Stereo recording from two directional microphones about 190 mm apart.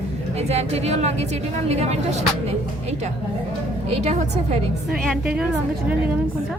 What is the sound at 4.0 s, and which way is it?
Speech, 35° right (ahead or behind).